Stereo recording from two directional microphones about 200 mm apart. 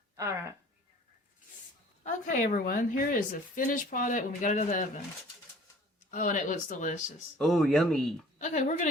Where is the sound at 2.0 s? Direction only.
40° left (ahead or behind).